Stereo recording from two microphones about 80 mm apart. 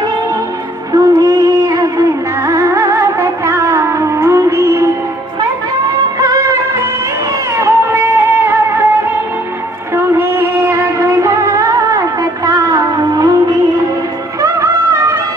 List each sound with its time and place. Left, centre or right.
0.9 s music: right
6.1 s music: right
7.5 s music: right
9.9 s music: right
12.4 s a sound: right
14.4 s music: right